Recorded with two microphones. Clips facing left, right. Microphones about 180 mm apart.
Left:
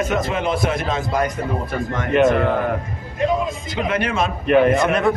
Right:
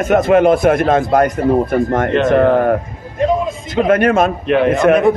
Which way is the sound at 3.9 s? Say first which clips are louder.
Right 9 dB; 50° right (ahead or behind).